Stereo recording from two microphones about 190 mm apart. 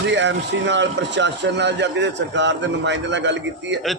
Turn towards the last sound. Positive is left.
turn(degrees=-70)  # may be behind; listen again after turning